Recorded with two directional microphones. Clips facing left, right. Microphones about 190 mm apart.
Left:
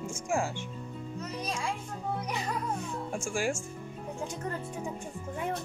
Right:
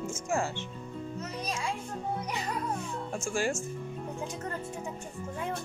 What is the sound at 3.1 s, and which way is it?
Speech, 10° left (ahead or behind).